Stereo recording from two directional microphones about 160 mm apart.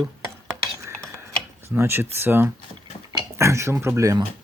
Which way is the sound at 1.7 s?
15° right (ahead or behind).